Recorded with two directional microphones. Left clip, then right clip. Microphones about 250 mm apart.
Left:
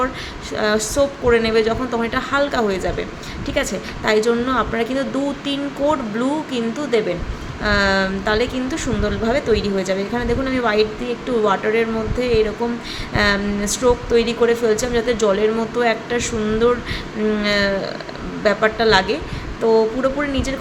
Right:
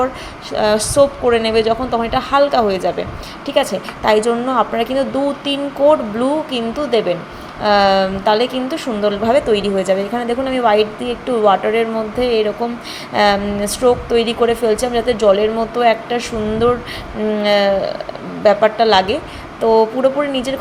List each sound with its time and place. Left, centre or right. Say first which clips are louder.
0.5 s a woman's voice: right 5 dB; centre